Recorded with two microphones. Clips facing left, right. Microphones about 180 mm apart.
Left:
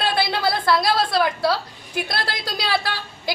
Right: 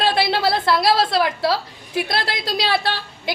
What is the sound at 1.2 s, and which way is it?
Speech, centre (ahead or behind).